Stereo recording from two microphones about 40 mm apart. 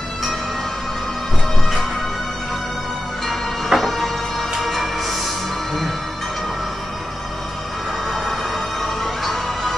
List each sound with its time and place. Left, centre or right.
3.3 s music: centre
8.1 s music: centre